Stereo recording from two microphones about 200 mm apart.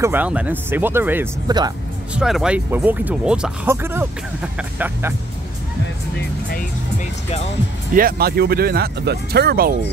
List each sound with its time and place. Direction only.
0.0 s speech: 10° right (ahead or behind)
1.5 s speech: 20° right (ahead or behind)
2.1 s speech: 5° right (ahead or behind)
7.9 s speech: 50° right (ahead or behind)